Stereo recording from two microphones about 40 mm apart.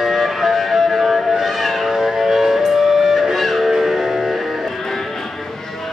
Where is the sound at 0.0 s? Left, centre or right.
Centre.